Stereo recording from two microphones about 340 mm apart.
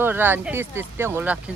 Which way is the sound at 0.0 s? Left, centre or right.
Centre.